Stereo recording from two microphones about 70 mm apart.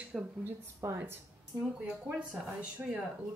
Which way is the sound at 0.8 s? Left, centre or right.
Right.